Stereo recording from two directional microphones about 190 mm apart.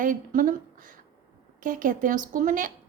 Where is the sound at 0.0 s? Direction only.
45° right (ahead or behind).